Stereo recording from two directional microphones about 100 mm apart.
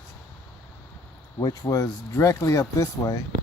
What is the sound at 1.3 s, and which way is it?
Speech, 40° left (ahead or behind).